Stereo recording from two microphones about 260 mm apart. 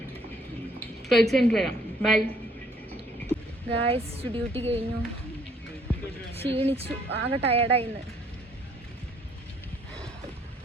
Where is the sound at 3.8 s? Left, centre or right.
Right.